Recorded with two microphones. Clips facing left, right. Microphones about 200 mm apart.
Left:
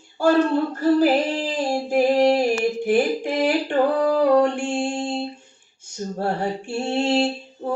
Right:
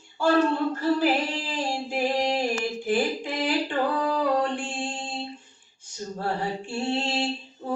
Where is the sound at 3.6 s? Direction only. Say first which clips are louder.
Left 7 dB; 45° left (ahead or behind).